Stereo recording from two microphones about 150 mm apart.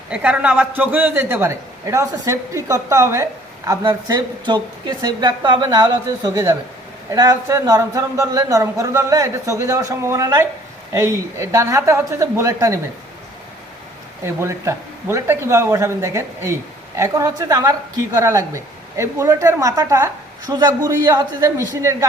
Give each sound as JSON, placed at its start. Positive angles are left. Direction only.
{"t": 0.1, "sound": "a man's voice", "side_deg": -10}
{"t": 14.3, "sound": "speech", "side_deg": -20}